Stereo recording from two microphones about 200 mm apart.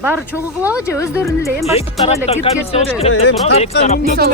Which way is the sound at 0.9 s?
15° left (ahead or behind).